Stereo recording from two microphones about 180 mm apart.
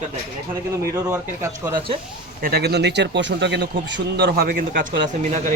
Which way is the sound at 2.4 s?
60° right (ahead or behind).